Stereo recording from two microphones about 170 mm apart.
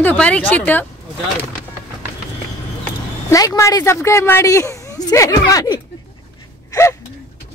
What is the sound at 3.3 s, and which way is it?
A woman's voice, 20° left (ahead or behind).